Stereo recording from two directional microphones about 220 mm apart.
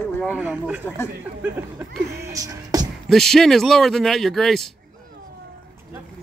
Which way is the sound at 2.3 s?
15° right (ahead or behind).